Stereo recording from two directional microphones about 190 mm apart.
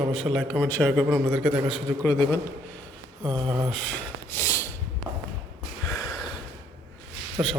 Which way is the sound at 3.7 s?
5° left (ahead or behind).